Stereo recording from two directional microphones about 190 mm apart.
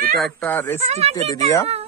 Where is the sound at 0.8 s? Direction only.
35° right (ahead or behind).